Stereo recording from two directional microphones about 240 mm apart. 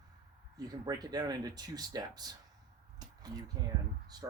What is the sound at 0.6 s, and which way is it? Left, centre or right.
Speech, centre.